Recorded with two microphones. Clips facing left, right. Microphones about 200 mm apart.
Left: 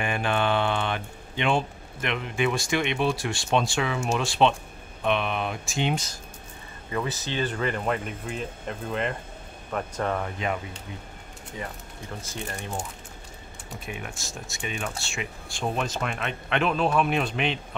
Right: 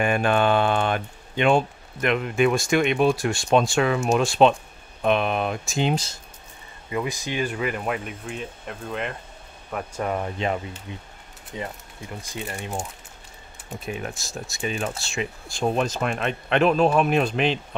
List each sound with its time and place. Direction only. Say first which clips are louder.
0.0 s speech: right 5 dB; 45° right (ahead or behind)
6.9 s speech: right 2 dB; 15° right (ahead or behind)
10.2 s speech: right 3 dB; 30° right (ahead or behind)
14.0 s speech: right 5 dB; 35° right (ahead or behind)